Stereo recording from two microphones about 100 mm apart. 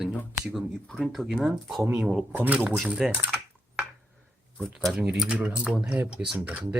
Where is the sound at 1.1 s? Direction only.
Centre (ahead or behind).